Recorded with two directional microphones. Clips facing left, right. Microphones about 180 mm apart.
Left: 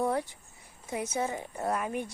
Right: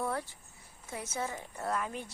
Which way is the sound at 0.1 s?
15° left (ahead or behind).